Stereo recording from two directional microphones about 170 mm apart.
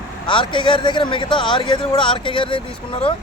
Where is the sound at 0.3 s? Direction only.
30° left (ahead or behind).